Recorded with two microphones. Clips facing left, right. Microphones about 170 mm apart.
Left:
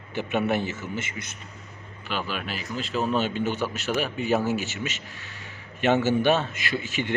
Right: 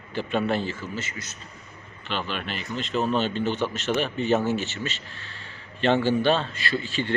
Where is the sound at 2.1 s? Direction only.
5° left (ahead or behind).